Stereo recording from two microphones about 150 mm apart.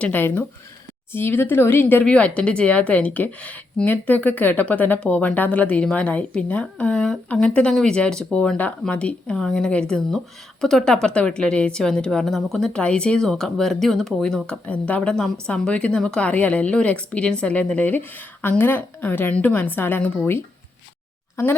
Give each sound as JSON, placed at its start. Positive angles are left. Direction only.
{"t": 0.0, "sound": "a woman's voice", "side_deg": 15}